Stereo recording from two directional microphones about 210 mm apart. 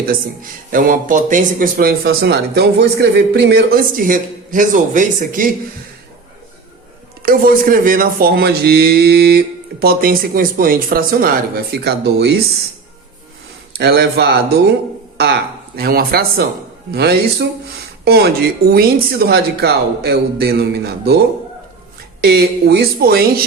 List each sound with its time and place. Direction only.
0.7 s speech: 40° right (ahead or behind)
7.2 s speech: 45° right (ahead or behind)
13.7 s speech: 50° right (ahead or behind)
22.2 s speech: 50° right (ahead or behind)